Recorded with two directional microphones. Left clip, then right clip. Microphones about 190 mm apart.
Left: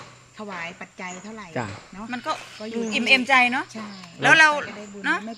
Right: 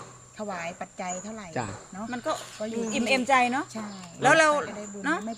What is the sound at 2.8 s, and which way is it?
A woman's voice, 50° right (ahead or behind).